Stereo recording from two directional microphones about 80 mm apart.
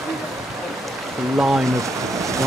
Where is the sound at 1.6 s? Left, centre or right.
Right.